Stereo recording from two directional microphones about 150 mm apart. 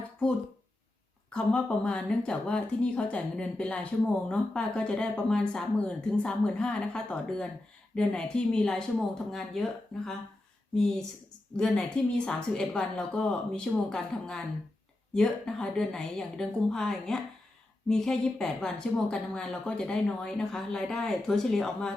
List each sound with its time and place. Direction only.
1.3 s a woman's voice: 5° left (ahead or behind)
11.5 s a woman's voice: 5° left (ahead or behind)